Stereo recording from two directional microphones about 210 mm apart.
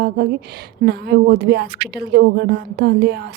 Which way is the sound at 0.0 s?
50° right (ahead or behind).